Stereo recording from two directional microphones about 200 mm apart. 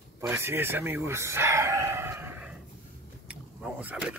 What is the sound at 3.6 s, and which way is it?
Vehicle, 5° right (ahead or behind).